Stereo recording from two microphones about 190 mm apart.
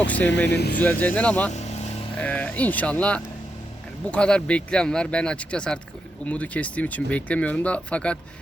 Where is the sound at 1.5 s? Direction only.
35° left (ahead or behind).